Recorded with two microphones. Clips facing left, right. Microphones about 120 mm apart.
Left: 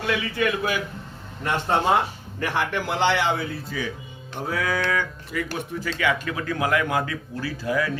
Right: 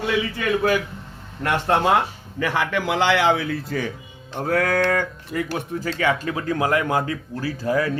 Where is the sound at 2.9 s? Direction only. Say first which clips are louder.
Right 4 dB; 90° right; by 3.9 s 70° right (ahead or behind).